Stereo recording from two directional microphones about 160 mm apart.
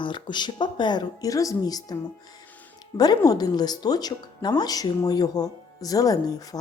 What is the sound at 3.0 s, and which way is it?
A woman's voice, 25° left (ahead or behind).